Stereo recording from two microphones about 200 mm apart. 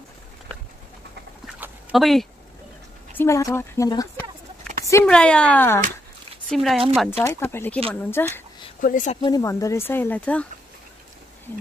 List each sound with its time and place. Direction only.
1.6 s dog: centre (ahead or behind)
3.2 s speech: 15° left (ahead or behind)
7.1 s speech: 10° left (ahead or behind)
8.8 s speech: 40° left (ahead or behind)
9.2 s speech: 15° left (ahead or behind)